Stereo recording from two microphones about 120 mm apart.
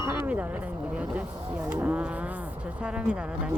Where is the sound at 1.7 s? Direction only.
15° right (ahead or behind).